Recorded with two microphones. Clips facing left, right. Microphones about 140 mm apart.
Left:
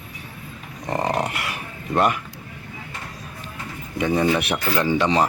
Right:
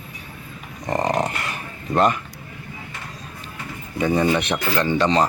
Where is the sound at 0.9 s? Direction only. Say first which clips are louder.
Right 2 dB; centre (ahead or behind).